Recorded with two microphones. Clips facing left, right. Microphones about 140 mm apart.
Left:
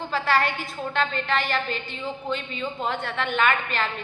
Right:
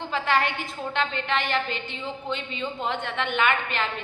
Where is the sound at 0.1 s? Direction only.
20° right (ahead or behind).